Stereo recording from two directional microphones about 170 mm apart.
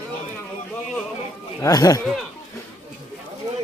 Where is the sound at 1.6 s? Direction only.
20° left (ahead or behind).